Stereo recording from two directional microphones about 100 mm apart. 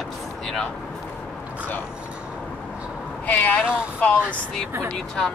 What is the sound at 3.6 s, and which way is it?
Speech, 10° right (ahead or behind).